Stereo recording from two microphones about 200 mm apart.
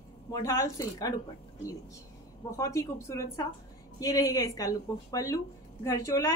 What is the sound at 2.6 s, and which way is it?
A woman's voice, 15° left (ahead or behind).